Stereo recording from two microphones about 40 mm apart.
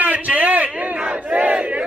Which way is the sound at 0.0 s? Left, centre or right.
Right.